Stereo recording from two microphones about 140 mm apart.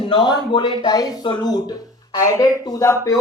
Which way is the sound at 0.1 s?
35° left (ahead or behind).